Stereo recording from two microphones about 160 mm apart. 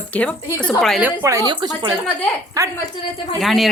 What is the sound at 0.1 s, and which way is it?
Speech, 10° left (ahead or behind).